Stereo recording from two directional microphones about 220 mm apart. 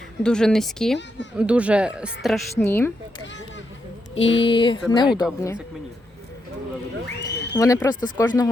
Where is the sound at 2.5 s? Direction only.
10° left (ahead or behind).